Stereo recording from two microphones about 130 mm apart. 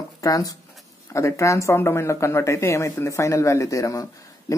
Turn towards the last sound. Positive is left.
turn(degrees=25)  # may be behind; listen again after turning